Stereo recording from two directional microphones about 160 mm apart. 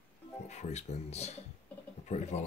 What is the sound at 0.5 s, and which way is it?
Speech, 45° left (ahead or behind).